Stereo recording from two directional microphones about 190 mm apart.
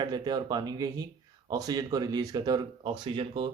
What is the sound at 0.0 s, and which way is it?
Speech, 20° right (ahead or behind).